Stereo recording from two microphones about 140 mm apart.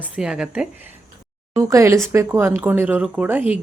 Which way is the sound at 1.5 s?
20° right (ahead or behind).